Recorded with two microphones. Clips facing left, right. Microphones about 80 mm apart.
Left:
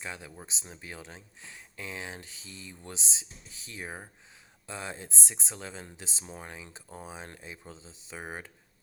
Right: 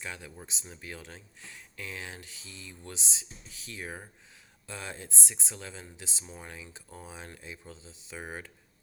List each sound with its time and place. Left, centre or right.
0.0 s speech: left